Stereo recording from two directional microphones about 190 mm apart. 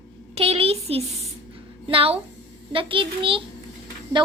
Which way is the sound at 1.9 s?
30° right (ahead or behind).